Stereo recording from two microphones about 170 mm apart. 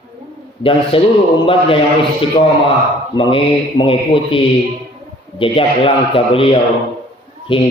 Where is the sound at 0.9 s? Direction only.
30° left (ahead or behind).